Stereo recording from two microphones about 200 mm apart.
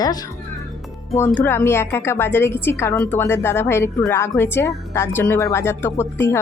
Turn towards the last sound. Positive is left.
turn(degrees=10)  # may be behind; listen again after turning